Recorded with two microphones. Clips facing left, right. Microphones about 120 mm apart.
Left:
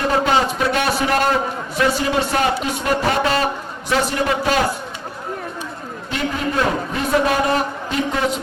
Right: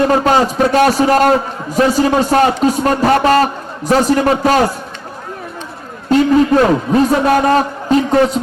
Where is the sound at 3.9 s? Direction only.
40° right (ahead or behind).